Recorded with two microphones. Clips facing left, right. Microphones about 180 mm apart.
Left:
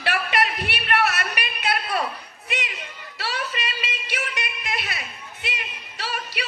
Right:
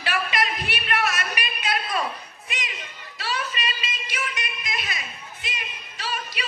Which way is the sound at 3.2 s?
65° left (ahead or behind).